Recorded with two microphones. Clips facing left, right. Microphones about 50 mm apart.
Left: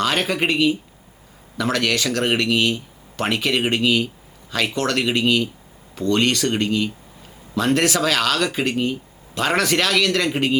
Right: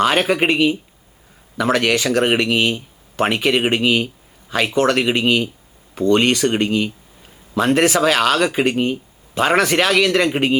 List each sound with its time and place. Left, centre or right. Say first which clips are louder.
0.0 s speech: right 5 dB; centre